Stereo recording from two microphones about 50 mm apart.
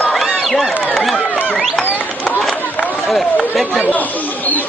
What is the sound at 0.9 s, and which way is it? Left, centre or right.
Chatter, centre.